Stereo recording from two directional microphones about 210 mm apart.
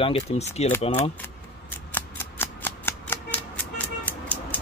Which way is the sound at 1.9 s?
10° left (ahead or behind).